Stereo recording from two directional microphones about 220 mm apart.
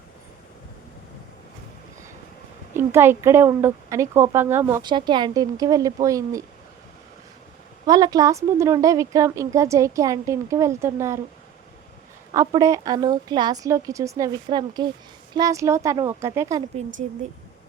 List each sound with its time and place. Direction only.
2.7 s speech: 10° right (ahead or behind)
7.9 s speech: 15° right (ahead or behind)
12.3 s speech: 15° right (ahead or behind)